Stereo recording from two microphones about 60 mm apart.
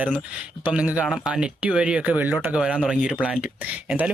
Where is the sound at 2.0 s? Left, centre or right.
Right.